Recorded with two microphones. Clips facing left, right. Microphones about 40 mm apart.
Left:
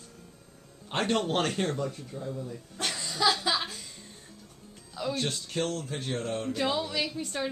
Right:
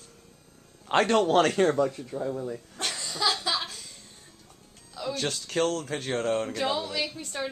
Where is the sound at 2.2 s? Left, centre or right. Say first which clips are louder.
Right 6 dB; right.